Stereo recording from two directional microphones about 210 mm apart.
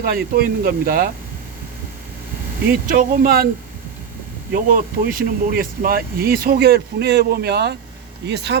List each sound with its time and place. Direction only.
0.0 s speech: 45° right (ahead or behind)
2.8 s speech: 45° right (ahead or behind)
4.5 s speech: 45° right (ahead or behind)